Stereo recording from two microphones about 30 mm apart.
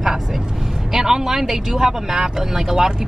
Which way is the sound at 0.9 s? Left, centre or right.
Centre.